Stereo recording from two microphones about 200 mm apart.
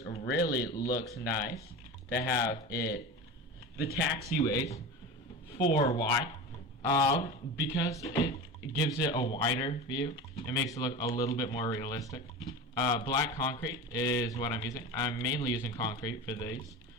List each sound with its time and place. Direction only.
0.0 s a sound: 30° left (ahead or behind)
0.3 s speech: 20° left (ahead or behind)
4.1 s speech: 20° left (ahead or behind)